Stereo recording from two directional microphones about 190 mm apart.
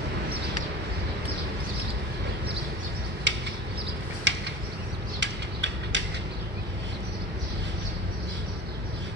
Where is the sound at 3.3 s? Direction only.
70° right (ahead or behind).